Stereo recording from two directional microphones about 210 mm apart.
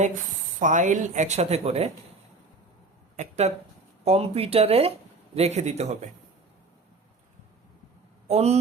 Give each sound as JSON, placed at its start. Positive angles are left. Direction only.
{"t": 0.6, "sound": "speech", "side_deg": -35}
{"t": 3.2, "sound": "speech", "side_deg": -30}
{"t": 8.3, "sound": "speech", "side_deg": -30}